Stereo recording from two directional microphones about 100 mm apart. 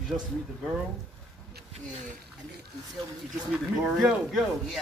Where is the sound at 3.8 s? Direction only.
Centre (ahead or behind).